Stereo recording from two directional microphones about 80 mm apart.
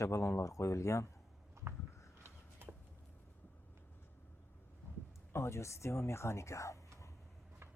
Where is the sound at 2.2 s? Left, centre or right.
Right.